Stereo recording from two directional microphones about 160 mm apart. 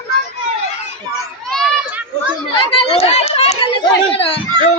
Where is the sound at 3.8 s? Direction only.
35° left (ahead or behind).